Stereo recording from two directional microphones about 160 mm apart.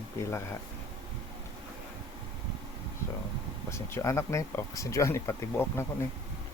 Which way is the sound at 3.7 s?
15° left (ahead or behind).